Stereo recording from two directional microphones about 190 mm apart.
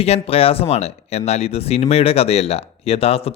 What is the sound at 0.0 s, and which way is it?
Speech, 30° left (ahead or behind).